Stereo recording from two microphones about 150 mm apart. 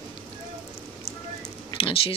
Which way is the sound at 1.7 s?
40° left (ahead or behind).